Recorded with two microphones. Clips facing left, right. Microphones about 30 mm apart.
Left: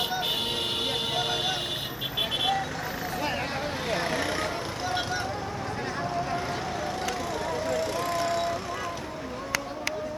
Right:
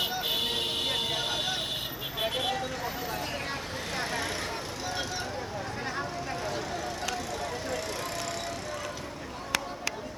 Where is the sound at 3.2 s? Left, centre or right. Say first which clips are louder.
Left 5 dB; centre.